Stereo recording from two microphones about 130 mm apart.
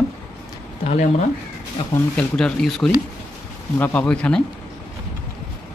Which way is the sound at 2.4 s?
5° left (ahead or behind).